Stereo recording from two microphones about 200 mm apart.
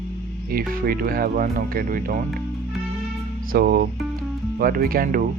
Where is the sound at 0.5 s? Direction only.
45° right (ahead or behind).